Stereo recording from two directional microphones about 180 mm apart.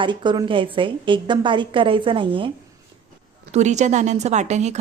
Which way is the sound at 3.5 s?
40° right (ahead or behind).